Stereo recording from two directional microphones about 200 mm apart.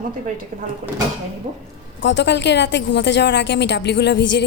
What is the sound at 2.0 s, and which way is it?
A woman's voice, 65° left (ahead or behind).